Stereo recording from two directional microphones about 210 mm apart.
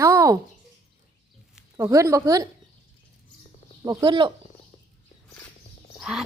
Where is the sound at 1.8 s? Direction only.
15° right (ahead or behind).